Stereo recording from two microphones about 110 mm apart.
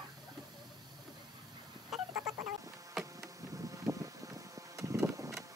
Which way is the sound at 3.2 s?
30° right (ahead or behind).